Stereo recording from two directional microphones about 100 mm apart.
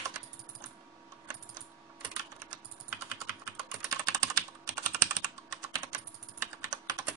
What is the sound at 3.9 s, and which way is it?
Typing, 35° right (ahead or behind).